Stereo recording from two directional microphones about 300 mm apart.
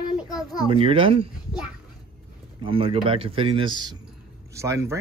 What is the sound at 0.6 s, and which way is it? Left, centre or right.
Speech, centre.